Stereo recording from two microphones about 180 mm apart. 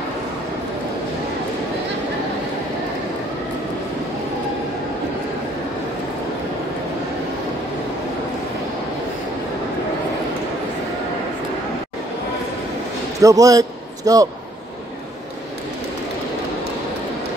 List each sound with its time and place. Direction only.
13.2 s a man's voice: 20° right (ahead or behind)